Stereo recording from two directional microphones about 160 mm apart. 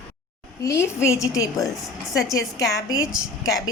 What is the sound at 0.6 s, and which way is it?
A woman's voice, 20° left (ahead or behind).